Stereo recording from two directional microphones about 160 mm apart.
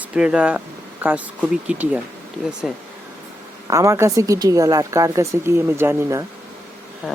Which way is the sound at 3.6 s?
20° right (ahead or behind).